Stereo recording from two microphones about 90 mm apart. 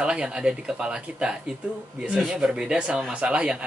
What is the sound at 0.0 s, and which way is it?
Speech, 10° right (ahead or behind).